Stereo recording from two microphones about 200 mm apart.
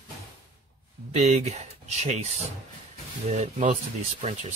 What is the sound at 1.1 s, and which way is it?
Speech, 35° right (ahead or behind).